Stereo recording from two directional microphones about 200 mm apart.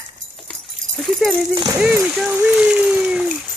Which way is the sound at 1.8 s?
5° right (ahead or behind).